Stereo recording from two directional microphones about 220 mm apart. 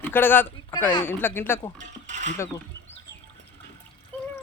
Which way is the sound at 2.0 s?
35° right (ahead or behind).